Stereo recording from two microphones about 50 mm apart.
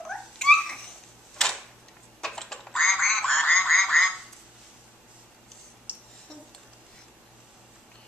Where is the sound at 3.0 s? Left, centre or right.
Centre.